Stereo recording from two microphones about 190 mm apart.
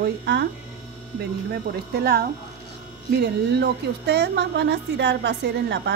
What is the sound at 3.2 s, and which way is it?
A woman's voice, 65° right (ahead or behind).